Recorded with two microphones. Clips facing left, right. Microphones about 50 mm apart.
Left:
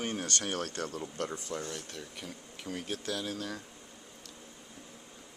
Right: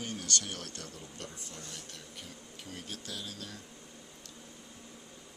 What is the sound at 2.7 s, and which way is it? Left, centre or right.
Speech, left.